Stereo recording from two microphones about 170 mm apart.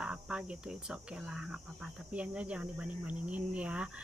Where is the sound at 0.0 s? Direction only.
5° right (ahead or behind).